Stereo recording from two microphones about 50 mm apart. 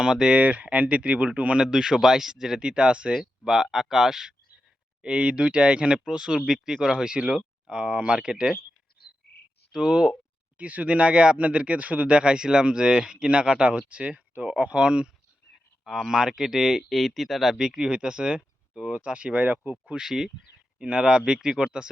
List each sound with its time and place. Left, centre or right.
0.0 s speech: centre
1.6 s speech: centre
3.1 s speech: centre
5.0 s speech: centre
9.7 s speech: centre
10.6 s speech: right
15.8 s speech: centre; by 20.0 s right
20.0 s speech: centre